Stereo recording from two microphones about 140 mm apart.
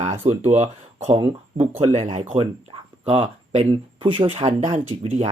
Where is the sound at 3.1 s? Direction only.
45° right (ahead or behind).